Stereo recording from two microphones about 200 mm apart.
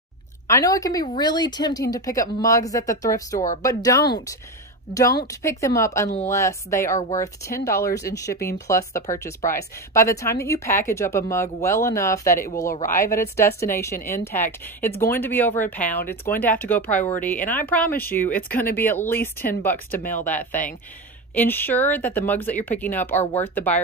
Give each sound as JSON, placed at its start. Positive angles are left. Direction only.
{"t": 0.5, "sound": "speech", "side_deg": 15}